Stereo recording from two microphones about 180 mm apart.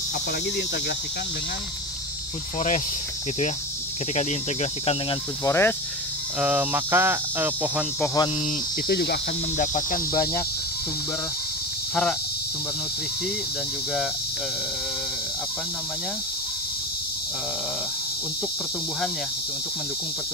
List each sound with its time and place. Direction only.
4.1 s speech: 40° left (ahead or behind)
5.4 s speech: 15° left (ahead or behind)
6.4 s speech: 10° right (ahead or behind)
8.0 s speech: 15° left (ahead or behind)
8.8 s speech: 65° left (ahead or behind)
10.1 s speech: 20° left (ahead or behind)
11.9 s speech: 5° left (ahead or behind)